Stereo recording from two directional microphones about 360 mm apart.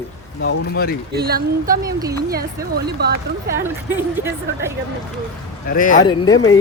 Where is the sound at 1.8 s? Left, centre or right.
Centre.